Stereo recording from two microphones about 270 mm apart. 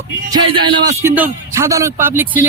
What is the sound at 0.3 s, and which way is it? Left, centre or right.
A man's voice, centre.